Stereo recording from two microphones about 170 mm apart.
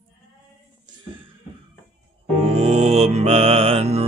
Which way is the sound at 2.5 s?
40° right (ahead or behind).